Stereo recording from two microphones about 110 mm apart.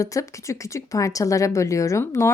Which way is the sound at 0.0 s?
30° left (ahead or behind).